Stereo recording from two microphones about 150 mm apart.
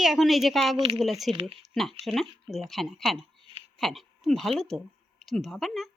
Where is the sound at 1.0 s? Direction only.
Centre (ahead or behind).